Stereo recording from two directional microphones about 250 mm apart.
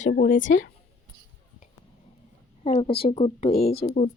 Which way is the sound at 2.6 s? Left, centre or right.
Left.